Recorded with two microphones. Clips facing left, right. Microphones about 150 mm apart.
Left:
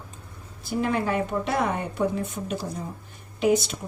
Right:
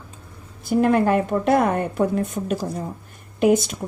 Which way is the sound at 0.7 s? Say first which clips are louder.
Right 8 dB; 55° right (ahead or behind).